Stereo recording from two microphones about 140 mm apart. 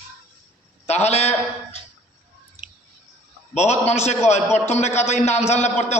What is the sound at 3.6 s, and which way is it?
A man's voice, 50° left (ahead or behind).